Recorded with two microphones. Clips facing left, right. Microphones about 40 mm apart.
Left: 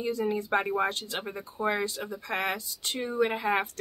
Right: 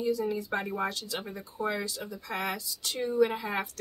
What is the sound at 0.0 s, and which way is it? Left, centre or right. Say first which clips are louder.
Speech: even; left.